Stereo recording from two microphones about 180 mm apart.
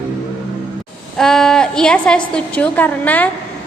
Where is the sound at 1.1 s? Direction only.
5° left (ahead or behind).